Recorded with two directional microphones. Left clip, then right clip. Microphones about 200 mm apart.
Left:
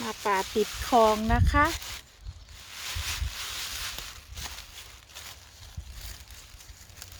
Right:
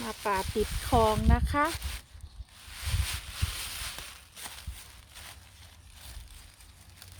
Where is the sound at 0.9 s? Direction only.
20° left (ahead or behind).